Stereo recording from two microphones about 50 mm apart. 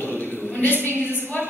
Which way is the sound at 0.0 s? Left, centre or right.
Left.